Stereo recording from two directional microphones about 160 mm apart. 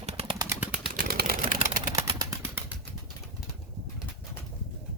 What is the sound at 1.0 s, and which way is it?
Vehicle, 65° right (ahead or behind).